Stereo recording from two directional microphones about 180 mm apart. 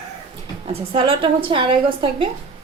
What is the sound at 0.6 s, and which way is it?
A woman's voice, 30° right (ahead or behind).